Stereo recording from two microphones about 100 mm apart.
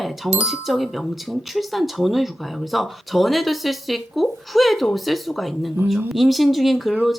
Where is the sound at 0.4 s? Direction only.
Centre (ahead or behind).